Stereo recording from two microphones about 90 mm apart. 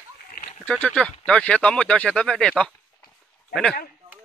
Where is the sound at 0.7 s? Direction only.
15° left (ahead or behind).